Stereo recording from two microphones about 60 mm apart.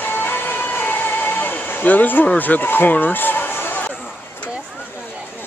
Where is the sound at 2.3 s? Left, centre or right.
Left.